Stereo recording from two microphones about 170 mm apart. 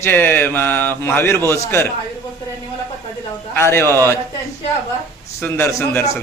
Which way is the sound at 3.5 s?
15° left (ahead or behind).